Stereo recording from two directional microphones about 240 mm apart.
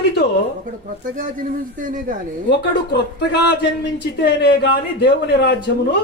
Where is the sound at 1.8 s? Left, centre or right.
Right.